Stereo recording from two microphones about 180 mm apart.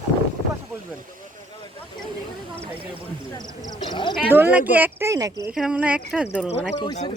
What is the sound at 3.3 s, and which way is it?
Speech, 25° left (ahead or behind).